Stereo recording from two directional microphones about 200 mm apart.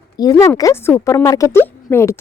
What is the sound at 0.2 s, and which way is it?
A woman's voice, 20° left (ahead or behind).